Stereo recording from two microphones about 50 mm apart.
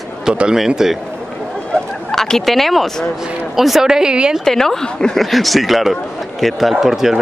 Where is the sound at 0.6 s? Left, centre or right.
Centre.